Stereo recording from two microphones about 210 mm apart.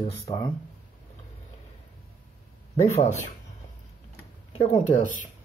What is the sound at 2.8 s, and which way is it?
Speech, 30° left (ahead or behind).